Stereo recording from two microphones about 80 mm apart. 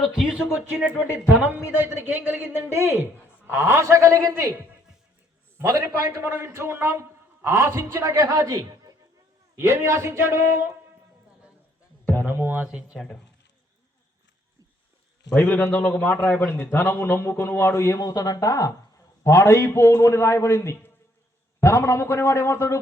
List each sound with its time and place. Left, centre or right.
0.0 s speech: centre
0.9 s music: right
1.9 s a man's voice: right
5.8 s a man's voice: right
9.6 s a man's voice: right
12.0 s a sound: right
12.6 s speech: centre
15.4 s a man's voice: left